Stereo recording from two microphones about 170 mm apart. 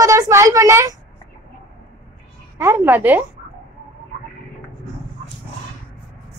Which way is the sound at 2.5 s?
15° right (ahead or behind).